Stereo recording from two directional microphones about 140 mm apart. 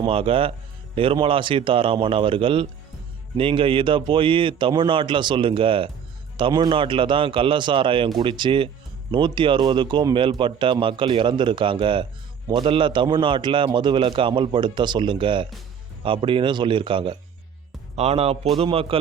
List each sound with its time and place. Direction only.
0.0 s a man's voice: 40° right (ahead or behind)
17.9 s a man's voice: 50° right (ahead or behind)